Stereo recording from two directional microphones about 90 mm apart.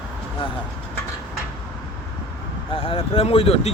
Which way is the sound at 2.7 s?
90° left.